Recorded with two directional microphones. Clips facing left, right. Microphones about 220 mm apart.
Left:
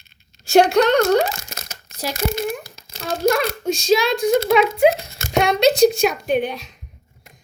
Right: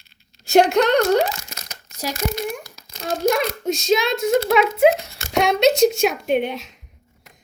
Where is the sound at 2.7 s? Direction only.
30° left (ahead or behind).